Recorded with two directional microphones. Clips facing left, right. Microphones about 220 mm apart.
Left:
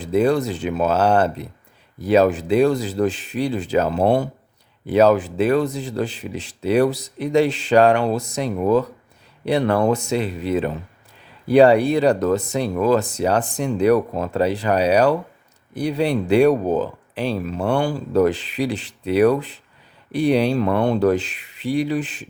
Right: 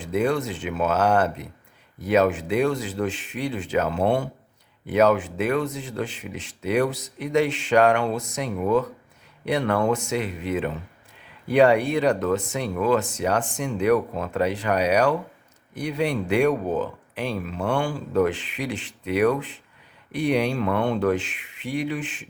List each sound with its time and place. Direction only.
0.0 s speech: 35° left (ahead or behind)